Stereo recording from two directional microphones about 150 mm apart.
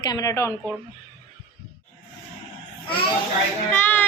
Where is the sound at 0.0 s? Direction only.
25° left (ahead or behind).